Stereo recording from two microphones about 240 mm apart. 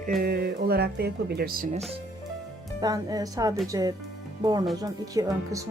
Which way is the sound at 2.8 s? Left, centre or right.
Centre.